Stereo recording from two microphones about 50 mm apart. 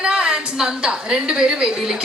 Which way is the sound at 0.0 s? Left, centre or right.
Centre.